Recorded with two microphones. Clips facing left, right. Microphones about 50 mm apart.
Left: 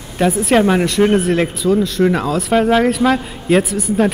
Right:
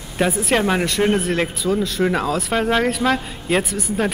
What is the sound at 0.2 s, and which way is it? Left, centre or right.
Speech, centre.